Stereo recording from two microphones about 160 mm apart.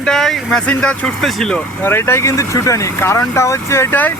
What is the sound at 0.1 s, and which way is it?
Speech, 5° left (ahead or behind).